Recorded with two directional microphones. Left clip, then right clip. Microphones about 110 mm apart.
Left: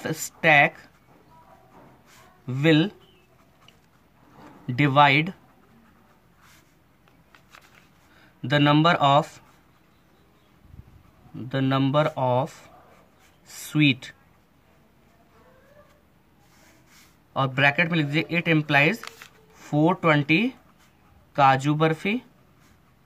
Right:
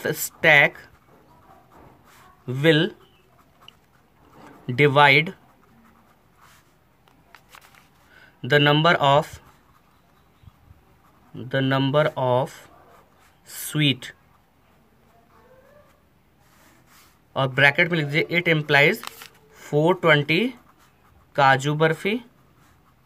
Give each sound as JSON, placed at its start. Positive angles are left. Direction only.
{"t": 0.0, "sound": "speech", "side_deg": -50}
{"t": 2.4, "sound": "speech", "side_deg": -45}
{"t": 4.6, "sound": "speech", "side_deg": -50}
{"t": 8.2, "sound": "speech", "side_deg": -45}
{"t": 11.3, "sound": "speech", "side_deg": -40}
{"t": 17.3, "sound": "speech", "side_deg": -45}